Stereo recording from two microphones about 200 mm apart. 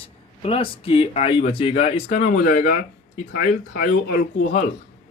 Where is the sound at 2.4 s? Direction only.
45° left (ahead or behind).